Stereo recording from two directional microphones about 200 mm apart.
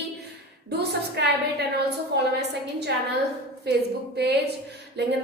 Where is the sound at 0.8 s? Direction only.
55° right (ahead or behind).